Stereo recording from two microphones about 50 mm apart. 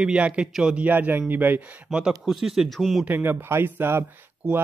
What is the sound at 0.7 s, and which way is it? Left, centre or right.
Speech, right.